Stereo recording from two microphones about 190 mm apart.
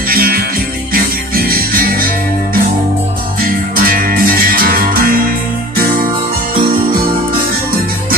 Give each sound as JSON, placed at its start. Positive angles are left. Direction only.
{"t": 0.1, "sound": "music", "side_deg": -50}
{"t": 3.3, "sound": "music", "side_deg": -50}